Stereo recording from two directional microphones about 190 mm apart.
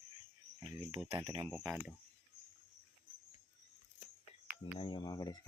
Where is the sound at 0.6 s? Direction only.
10° right (ahead or behind).